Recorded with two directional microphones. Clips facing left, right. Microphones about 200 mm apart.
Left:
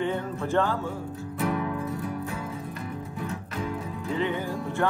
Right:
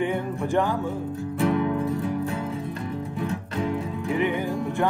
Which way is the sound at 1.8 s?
30° right (ahead or behind).